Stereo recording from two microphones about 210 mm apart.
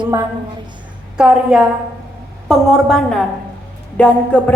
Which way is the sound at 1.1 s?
5° right (ahead or behind).